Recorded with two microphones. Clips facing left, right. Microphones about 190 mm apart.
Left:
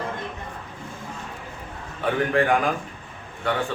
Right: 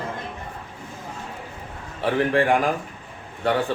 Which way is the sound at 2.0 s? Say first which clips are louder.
Right 1 dB; 30° right (ahead or behind).